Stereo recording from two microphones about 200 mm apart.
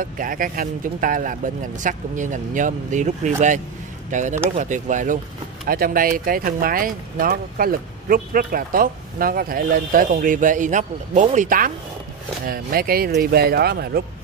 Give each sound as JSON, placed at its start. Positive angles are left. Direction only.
{"t": 0.0, "sound": "speech", "side_deg": -45}